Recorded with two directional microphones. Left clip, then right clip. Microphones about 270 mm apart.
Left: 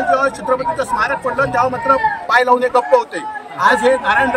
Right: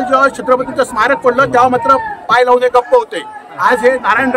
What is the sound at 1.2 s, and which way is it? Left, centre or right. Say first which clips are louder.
Speech: right 6 dB; right.